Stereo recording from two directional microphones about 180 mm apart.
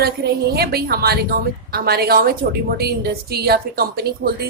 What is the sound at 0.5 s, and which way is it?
A woman's voice, 60° right (ahead or behind).